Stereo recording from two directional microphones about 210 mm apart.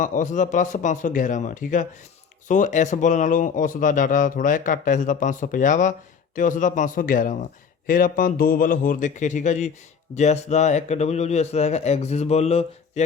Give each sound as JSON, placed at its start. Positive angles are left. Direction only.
{"t": 0.0, "sound": "a man's voice", "side_deg": 35}